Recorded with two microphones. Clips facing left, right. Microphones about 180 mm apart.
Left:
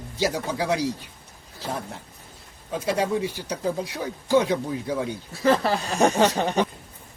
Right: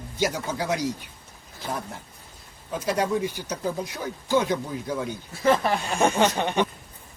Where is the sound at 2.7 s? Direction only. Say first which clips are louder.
Left 1 dB; 30° left (ahead or behind).